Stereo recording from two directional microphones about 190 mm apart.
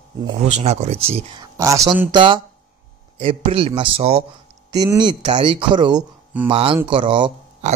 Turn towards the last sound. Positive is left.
turn(degrees=-25)  # may be behind; listen again after turning